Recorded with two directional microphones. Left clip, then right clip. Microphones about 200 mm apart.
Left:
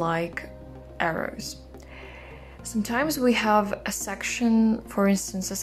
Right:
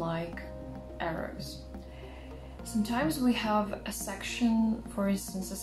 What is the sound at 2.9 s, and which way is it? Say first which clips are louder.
Speech: left 7 dB; 50° left (ahead or behind).